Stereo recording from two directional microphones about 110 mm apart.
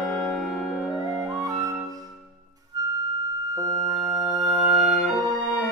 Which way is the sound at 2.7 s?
35° right (ahead or behind).